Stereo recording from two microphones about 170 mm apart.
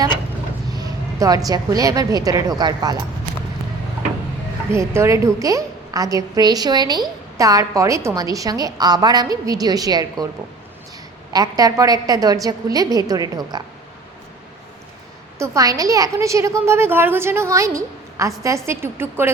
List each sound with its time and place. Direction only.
0.7 s a sound: 20° right (ahead or behind)
1.5 s a woman's voice: 20° right (ahead or behind)
4.7 s a woman's voice: 15° right (ahead or behind)
11.3 s a woman's voice: 20° right (ahead or behind)
15.4 s a woman's voice: 20° right (ahead or behind)